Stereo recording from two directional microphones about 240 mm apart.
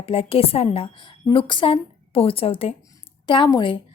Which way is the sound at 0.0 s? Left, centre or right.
Left.